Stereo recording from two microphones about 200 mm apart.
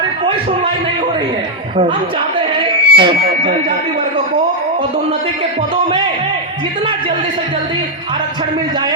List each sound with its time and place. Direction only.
2.6 s music: 25° right (ahead or behind)